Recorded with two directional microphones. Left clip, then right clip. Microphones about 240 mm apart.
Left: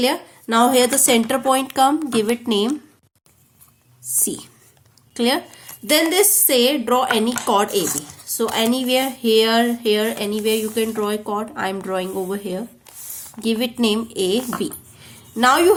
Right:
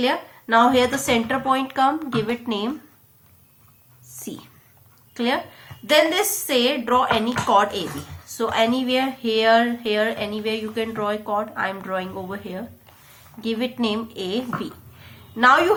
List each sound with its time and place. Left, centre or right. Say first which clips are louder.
0.0 s speech: left 2 dB; left
4.2 s a woman's voice: left 9 dB; left